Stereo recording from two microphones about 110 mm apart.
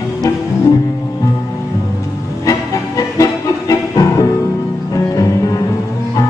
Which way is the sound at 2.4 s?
30° left (ahead or behind).